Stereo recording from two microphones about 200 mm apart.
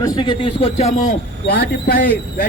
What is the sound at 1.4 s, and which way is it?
Speech, 50° left (ahead or behind).